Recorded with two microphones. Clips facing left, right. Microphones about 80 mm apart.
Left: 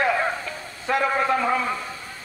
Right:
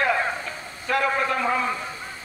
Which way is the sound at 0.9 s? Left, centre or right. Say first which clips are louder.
Left 1 dB; left.